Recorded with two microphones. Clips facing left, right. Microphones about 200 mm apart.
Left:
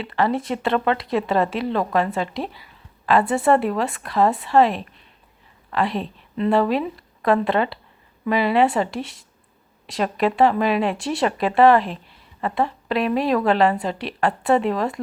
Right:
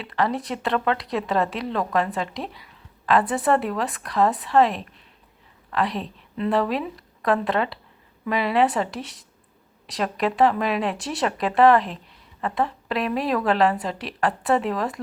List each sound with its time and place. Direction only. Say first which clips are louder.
0.0 s a woman's voice: left 3 dB; centre (ahead or behind)